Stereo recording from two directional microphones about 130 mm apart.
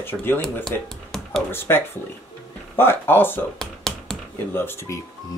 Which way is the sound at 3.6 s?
5° left (ahead or behind).